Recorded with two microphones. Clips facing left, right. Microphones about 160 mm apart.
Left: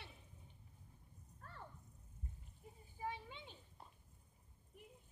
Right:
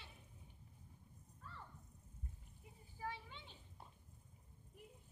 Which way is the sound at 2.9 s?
15° left (ahead or behind).